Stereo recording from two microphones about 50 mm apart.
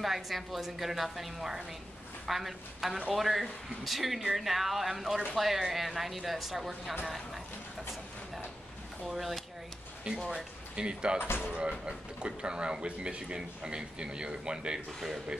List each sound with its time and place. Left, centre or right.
0.0 s a woman's voice: centre
9.0 s a woman's voice: centre
10.3 s speech: centre
11.1 s speech: left
11.4 s speech: centre
14.9 s a woman's voice: centre